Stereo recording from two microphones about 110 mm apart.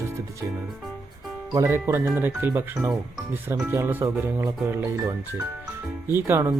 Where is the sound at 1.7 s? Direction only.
20° right (ahead or behind).